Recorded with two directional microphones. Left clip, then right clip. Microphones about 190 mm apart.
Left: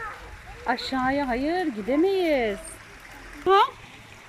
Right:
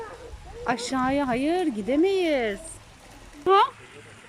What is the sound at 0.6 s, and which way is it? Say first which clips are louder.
Speech: even; 5° right (ahead or behind).